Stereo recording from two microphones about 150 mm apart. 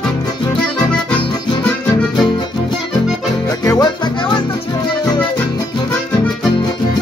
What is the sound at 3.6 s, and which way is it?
Music, 25° left (ahead or behind).